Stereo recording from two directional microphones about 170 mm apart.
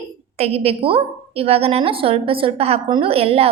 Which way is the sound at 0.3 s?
35° right (ahead or behind).